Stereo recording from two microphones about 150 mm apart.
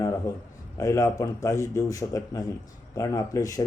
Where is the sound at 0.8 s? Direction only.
20° left (ahead or behind).